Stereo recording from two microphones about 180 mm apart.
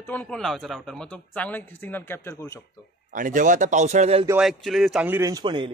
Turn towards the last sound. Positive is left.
turn(degrees=-25)  # may be behind; listen again after turning